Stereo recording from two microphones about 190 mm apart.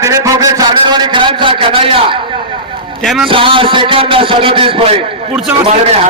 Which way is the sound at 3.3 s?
25° right (ahead or behind).